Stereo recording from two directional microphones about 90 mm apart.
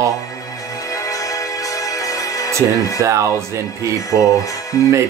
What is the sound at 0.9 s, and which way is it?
Music, 40° left (ahead or behind).